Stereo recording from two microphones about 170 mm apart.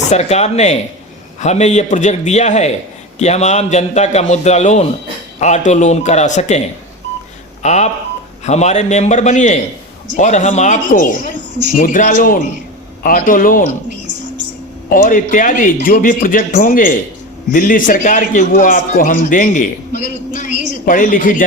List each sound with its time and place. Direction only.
0.1 s a man's voice: 40° left (ahead or behind)
7.6 s a man's voice: 45° left (ahead or behind)
14.8 s a man's voice: 55° left (ahead or behind)
20.5 s speech: 85° right
20.8 s a man's voice: 55° left (ahead or behind)